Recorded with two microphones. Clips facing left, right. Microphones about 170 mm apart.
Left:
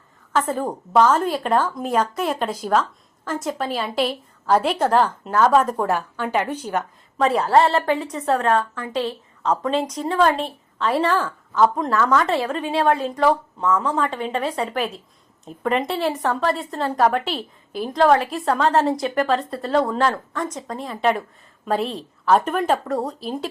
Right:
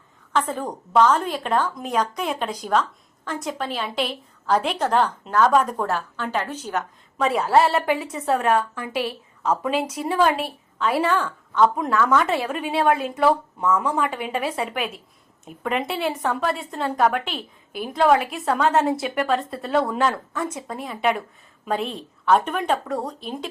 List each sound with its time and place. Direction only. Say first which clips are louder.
0.3 s a woman's voice: left 2 dB; 5° left (ahead or behind)
7.2 s a woman's voice: left 2 dB; centre (ahead or behind)
17.2 s a woman's voice: left 4 dB; 35° left (ahead or behind)
17.7 s a woman's voice: left 2 dB; 5° right (ahead or behind)